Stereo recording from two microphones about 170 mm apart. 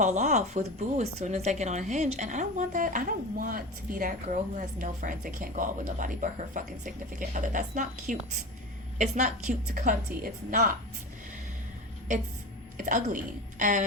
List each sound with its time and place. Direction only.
0.0 s speech: 45° right (ahead or behind)
12.7 s speech: 50° right (ahead or behind)